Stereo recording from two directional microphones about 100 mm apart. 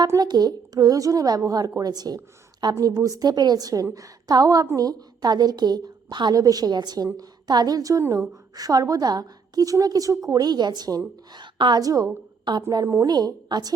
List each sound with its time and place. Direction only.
0.2 s a woman's voice: 45° right (ahead or behind)
11.5 s a woman's voice: 50° right (ahead or behind)
11.8 s a woman's voice: 35° right (ahead or behind)